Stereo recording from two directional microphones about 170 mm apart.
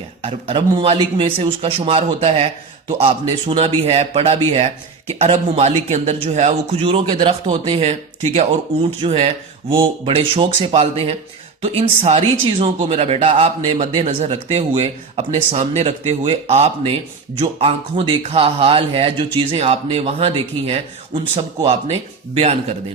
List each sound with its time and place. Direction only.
0.2 s speech: 30° right (ahead or behind)